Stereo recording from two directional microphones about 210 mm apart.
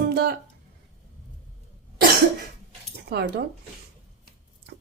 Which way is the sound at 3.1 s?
50° right (ahead or behind).